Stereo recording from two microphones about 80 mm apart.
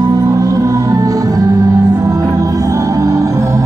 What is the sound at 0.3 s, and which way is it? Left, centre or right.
Music, right.